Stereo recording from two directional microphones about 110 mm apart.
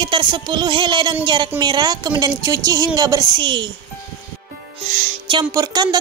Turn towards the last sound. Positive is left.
turn(degrees=-35)  # may be behind; listen again after turning